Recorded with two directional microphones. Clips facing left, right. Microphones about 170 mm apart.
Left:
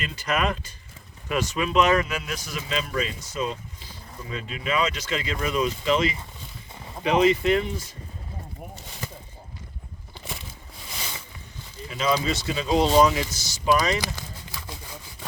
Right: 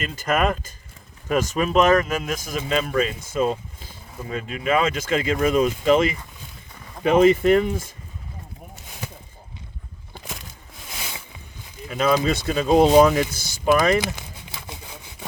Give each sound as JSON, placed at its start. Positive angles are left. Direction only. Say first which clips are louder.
{"t": 0.0, "sound": "speech", "louder": "right 4 dB", "side_deg": -45}
{"t": 10.2, "sound": "a sound", "louder": "left 1 dB", "side_deg": 0}
{"t": 11.9, "sound": "speech", "louder": "right 4 dB", "side_deg": -50}
{"t": 14.2, "sound": "sawing", "louder": "even", "side_deg": -20}